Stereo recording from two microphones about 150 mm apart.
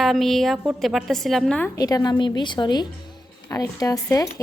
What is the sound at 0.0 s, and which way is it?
A woman's voice, centre (ahead or behind).